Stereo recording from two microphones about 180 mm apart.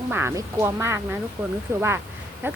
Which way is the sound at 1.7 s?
15° right (ahead or behind).